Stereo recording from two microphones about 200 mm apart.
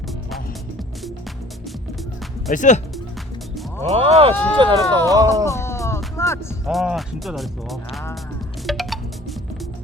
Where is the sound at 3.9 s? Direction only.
30° right (ahead or behind).